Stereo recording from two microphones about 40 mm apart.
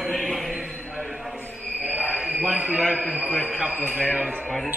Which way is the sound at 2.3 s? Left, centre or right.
Right.